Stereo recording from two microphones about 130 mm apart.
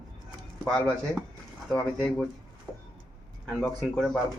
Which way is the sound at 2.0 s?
10° left (ahead or behind).